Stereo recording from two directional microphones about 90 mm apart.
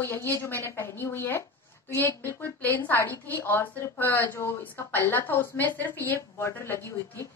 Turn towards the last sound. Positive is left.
turn(degrees=25)  # may be behind; listen again after turning